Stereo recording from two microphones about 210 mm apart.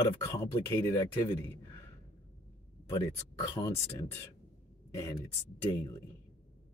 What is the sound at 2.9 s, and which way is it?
Speech, 15° left (ahead or behind).